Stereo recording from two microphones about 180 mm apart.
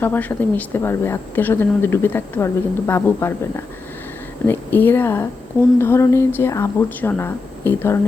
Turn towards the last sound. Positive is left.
turn(degrees=10)  # may be behind; listen again after turning